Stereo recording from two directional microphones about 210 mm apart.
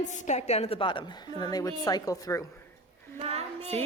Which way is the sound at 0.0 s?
35° left (ahead or behind).